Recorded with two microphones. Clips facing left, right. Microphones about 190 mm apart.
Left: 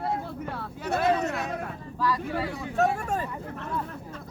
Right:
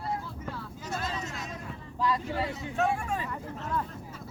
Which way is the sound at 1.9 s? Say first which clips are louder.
Left 1 dB; 20° right (ahead or behind).